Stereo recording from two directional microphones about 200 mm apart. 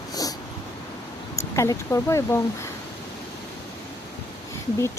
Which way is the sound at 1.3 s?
15° left (ahead or behind).